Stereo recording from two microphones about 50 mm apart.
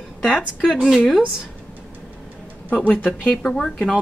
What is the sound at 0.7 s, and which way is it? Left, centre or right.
Speech, centre.